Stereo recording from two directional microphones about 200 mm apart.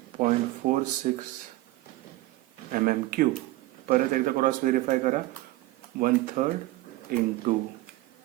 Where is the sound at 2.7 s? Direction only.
45° right (ahead or behind).